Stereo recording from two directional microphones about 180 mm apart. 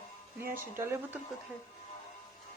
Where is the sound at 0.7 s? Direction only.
15° right (ahead or behind).